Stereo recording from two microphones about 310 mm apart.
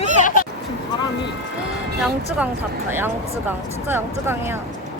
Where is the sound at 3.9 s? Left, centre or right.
Centre.